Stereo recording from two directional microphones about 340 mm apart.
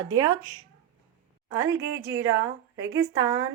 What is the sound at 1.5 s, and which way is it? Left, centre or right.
A woman's voice, centre.